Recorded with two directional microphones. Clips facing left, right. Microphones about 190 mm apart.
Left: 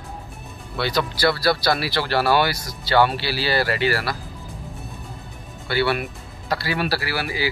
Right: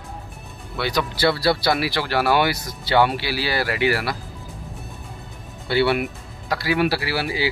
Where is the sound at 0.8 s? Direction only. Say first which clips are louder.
Even; 15° right (ahead or behind).